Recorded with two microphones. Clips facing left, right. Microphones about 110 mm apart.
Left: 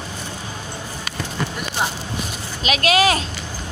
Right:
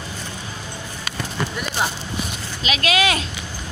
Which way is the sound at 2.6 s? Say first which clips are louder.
Left 3 dB; 45° left (ahead or behind).